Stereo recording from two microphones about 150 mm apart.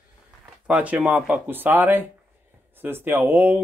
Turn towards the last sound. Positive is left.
turn(degrees=-15)  # may be behind; listen again after turning